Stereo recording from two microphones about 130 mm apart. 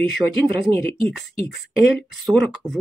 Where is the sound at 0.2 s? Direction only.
20° right (ahead or behind).